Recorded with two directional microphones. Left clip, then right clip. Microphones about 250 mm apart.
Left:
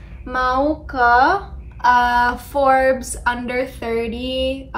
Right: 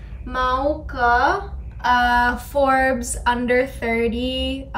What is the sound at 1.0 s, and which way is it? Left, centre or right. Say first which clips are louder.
Speech: left 4 dB; right.